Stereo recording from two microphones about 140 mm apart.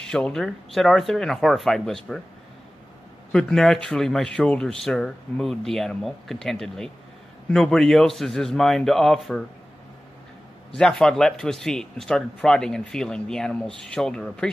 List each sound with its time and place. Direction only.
0.0 s speech: 5° left (ahead or behind)
3.3 s speech: 5° left (ahead or behind)
10.7 s speech: 5° left (ahead or behind)